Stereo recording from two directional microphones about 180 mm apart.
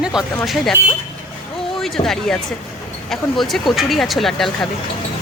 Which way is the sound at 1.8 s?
Centre (ahead or behind).